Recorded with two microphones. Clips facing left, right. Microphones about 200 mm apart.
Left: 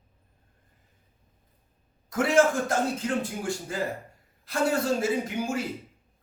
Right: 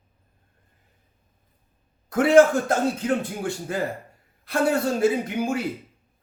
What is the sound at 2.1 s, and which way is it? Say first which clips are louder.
Speech: right 6 dB; 55° right (ahead or behind).